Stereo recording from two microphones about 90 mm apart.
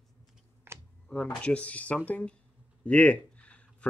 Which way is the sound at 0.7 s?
25° right (ahead or behind).